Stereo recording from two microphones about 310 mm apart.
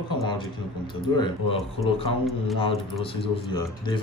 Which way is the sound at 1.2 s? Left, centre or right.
Centre.